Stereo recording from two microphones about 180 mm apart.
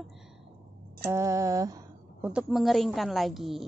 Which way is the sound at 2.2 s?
5° right (ahead or behind).